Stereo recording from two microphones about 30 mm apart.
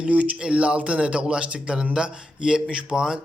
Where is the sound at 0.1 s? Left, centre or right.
Right.